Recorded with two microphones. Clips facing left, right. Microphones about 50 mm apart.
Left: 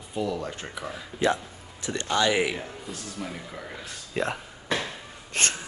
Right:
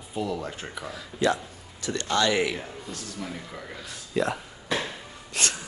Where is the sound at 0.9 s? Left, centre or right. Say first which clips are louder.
Even; left; by 3.9 s centre.